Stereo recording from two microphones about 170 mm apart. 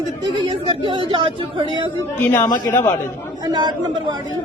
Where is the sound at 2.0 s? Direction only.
15° left (ahead or behind).